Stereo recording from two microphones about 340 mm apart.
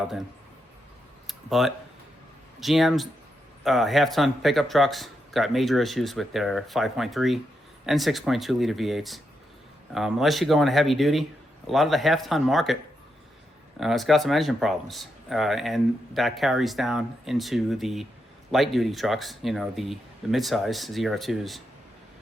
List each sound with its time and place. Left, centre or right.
1.3 s speech: centre
13.7 s speech: centre